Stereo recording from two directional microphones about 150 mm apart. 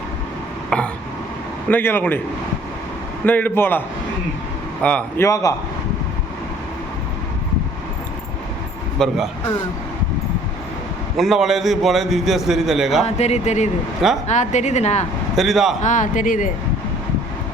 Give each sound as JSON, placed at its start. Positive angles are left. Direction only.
{"t": 0.7, "sound": "throat clearing", "side_deg": 5}
{"t": 1.7, "sound": "a man's voice", "side_deg": 15}
{"t": 3.2, "sound": "a man's voice", "side_deg": 10}
{"t": 5.2, "sound": "a man's voice", "side_deg": 20}
{"t": 9.0, "sound": "a man's voice", "side_deg": 5}
{"t": 11.2, "sound": "a man's voice", "side_deg": 0}
{"t": 13.1, "sound": "speech", "side_deg": 45}
{"t": 15.4, "sound": "a man's voice", "side_deg": 0}
{"t": 15.8, "sound": "speech", "side_deg": 55}